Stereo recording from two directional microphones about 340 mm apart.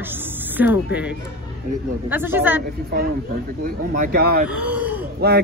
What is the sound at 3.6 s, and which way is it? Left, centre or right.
Speech, right.